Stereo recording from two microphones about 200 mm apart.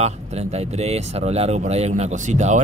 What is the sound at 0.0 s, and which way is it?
Speech, 30° right (ahead or behind).